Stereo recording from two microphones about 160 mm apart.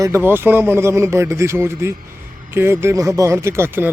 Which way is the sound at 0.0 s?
15° right (ahead or behind).